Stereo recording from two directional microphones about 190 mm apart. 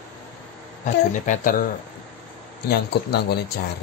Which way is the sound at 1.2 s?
45° left (ahead or behind).